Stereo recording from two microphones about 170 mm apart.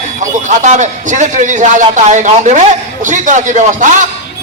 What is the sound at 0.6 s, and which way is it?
A man's voice, 45° right (ahead or behind).